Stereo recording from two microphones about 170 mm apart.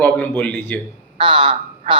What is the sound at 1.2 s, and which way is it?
Speech, 30° right (ahead or behind).